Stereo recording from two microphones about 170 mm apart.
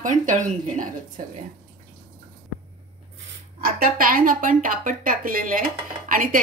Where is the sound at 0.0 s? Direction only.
50° right (ahead or behind).